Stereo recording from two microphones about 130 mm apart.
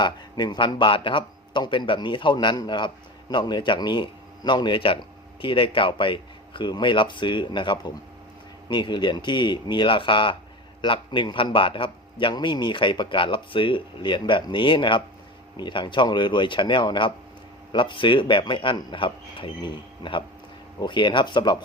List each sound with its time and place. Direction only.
0.0 s speech: 35° left (ahead or behind)